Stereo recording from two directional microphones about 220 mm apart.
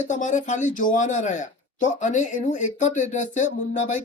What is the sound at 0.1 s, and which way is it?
Speech, 35° left (ahead or behind).